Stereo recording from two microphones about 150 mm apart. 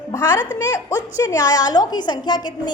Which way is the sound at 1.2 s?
25° left (ahead or behind).